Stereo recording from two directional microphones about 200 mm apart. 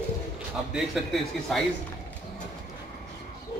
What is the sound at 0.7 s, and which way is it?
Speech, centre (ahead or behind).